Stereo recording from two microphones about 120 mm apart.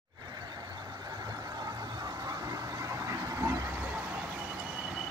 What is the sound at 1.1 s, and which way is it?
Vehicle, 30° right (ahead or behind).